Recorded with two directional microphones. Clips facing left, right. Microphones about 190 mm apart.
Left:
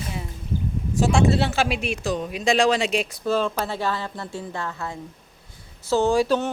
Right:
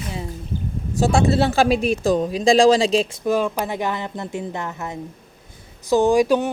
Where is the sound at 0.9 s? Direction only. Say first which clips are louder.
Right 2 dB; 35° right (ahead or behind).